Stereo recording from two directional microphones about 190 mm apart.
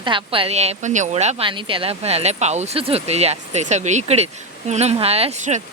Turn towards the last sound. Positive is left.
turn(degrees=-35)  # may be behind; listen again after turning